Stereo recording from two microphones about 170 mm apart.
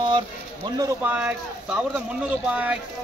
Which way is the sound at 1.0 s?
10° right (ahead or behind).